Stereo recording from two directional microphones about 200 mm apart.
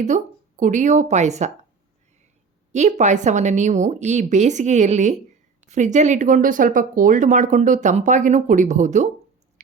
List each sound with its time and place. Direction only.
0.0 s speech: 40° right (ahead or behind)
2.7 s speech: 35° right (ahead or behind)